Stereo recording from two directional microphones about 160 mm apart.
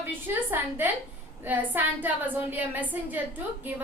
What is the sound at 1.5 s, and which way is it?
A woman's voice, 10° right (ahead or behind).